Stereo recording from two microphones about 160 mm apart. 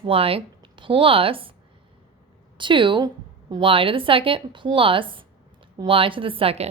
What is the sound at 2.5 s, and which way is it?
A woman's voice, 30° right (ahead or behind).